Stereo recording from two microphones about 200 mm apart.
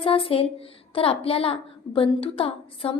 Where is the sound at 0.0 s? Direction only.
30° left (ahead or behind).